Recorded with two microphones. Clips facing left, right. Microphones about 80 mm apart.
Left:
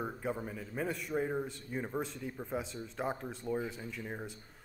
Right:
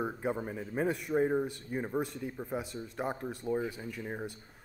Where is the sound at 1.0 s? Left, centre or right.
Centre.